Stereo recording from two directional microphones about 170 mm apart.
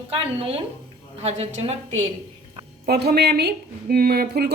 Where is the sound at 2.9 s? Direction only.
70° right (ahead or behind).